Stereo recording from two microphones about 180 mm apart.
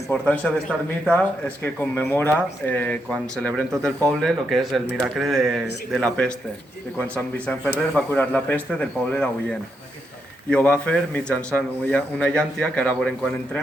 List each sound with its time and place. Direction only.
0.1 s a man's voice: 5° left (ahead or behind)